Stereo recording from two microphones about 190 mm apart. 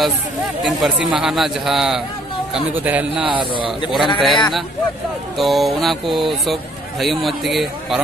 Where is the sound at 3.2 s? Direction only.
25° right (ahead or behind).